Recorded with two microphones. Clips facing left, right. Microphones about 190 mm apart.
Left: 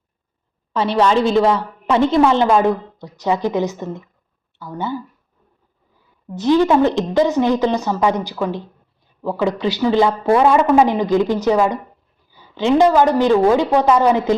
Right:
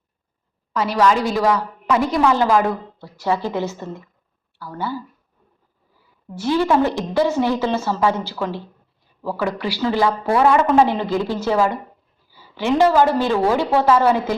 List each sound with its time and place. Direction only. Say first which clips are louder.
0.7 s a woman's voice: left 2 dB; 30° left (ahead or behind)
6.3 s speech: left 4 dB; 20° left (ahead or behind)